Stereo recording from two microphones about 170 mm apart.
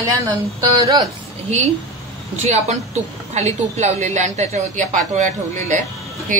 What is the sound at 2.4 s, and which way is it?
A woman's voice, 40° right (ahead or behind).